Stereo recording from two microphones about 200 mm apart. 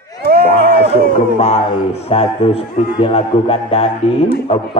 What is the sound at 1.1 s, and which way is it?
A man's voice, 30° left (ahead or behind).